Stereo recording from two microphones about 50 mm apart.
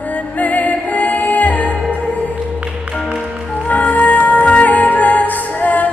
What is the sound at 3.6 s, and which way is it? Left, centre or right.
Music, left.